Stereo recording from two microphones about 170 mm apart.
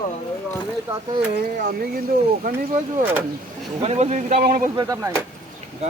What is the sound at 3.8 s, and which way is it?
Speech, 40° right (ahead or behind).